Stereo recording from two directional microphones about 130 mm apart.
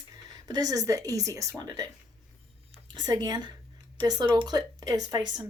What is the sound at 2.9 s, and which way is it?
A woman's voice, 35° right (ahead or behind).